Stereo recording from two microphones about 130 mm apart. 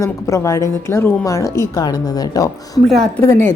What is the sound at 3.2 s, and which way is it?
Speech, 15° left (ahead or behind).